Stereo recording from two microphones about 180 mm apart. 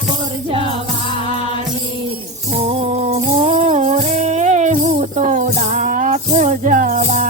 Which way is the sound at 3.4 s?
35° right (ahead or behind).